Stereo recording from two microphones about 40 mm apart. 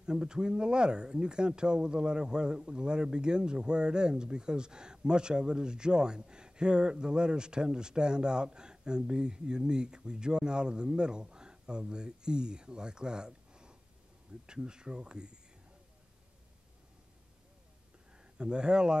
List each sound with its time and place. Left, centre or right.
0.0 s speech: right
18.1 s speech: right